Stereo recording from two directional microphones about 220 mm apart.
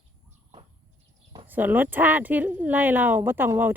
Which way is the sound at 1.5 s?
10° right (ahead or behind).